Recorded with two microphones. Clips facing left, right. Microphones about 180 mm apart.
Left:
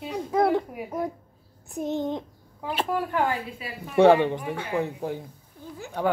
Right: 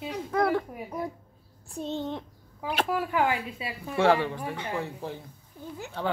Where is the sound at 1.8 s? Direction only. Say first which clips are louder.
Left 4 dB; 15° left (ahead or behind).